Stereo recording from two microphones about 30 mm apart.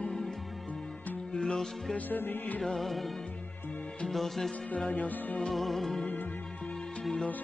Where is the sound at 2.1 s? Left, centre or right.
Left.